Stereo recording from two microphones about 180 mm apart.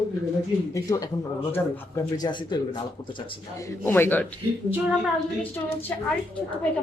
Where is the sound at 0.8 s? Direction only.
20° left (ahead or behind).